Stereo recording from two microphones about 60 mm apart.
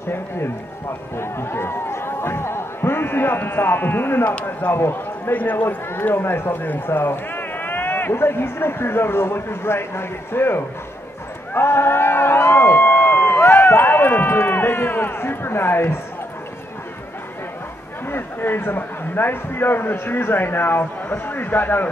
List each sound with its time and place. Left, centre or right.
0.1 s a man's voice: left
5.3 s a man's voice: left
5.9 s speech: left
18.0 s speech: left